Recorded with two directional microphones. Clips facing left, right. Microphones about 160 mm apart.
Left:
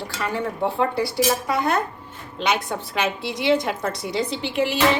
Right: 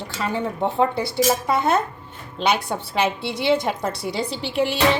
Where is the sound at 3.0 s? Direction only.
30° right (ahead or behind).